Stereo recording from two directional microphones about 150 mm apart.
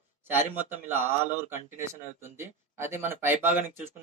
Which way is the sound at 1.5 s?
20° right (ahead or behind).